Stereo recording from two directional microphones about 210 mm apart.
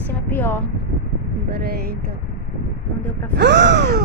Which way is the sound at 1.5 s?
50° right (ahead or behind).